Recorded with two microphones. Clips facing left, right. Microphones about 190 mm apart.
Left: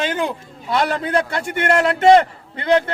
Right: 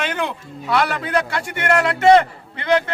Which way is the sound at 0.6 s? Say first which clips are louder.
Left 1 dB; 25° left (ahead or behind).